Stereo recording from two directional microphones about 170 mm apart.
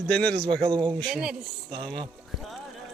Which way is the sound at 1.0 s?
5° right (ahead or behind).